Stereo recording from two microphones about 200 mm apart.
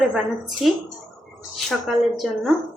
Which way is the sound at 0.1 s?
Centre (ahead or behind).